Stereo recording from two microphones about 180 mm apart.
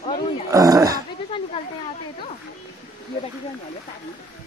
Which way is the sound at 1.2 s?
30° left (ahead or behind).